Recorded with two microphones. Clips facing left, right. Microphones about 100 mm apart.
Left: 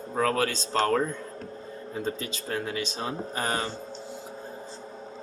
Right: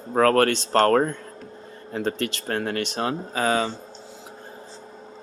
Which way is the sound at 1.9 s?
70° right (ahead or behind).